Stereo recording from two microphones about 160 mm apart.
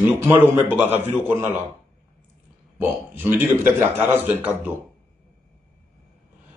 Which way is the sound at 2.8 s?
10° right (ahead or behind).